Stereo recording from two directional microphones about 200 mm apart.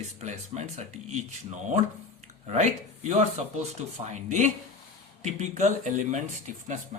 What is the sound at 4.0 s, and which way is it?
Speech, 25° right (ahead or behind).